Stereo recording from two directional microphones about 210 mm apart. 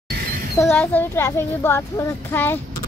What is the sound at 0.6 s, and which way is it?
Speech, 5° left (ahead or behind).